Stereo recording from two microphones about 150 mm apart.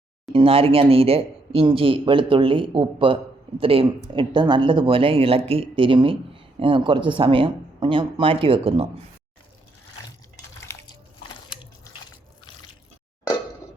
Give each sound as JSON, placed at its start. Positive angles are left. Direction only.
{"t": 0.3, "sound": "speech", "side_deg": -40}